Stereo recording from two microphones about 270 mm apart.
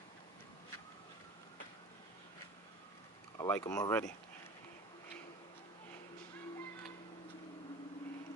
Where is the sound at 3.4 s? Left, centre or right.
Centre.